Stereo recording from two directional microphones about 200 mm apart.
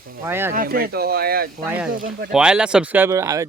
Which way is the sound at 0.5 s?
45° right (ahead or behind).